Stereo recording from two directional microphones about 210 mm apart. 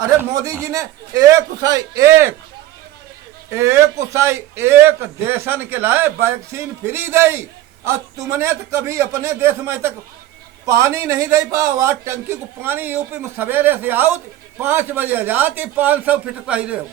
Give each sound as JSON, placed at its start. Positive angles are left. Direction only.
{"t": 0.2, "sound": "a man's voice", "side_deg": -15}
{"t": 3.5, "sound": "a man's voice", "side_deg": -15}